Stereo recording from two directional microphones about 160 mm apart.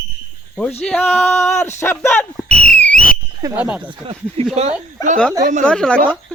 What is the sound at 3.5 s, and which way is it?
Speech, 10° right (ahead or behind).